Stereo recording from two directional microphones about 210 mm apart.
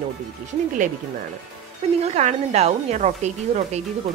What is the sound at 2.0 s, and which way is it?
Speech, 30° right (ahead or behind).